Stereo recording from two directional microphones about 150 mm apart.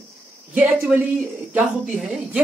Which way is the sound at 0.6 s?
10° right (ahead or behind).